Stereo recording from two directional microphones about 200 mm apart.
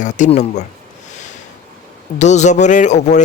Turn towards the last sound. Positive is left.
turn(degrees=35)  # may be behind; listen again after turning